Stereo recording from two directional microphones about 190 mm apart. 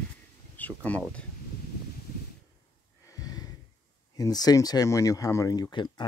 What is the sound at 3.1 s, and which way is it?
Snort, 20° left (ahead or behind).